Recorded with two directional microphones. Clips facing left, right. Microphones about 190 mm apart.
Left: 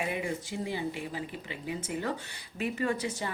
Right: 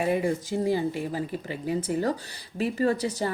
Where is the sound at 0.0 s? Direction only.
40° right (ahead or behind).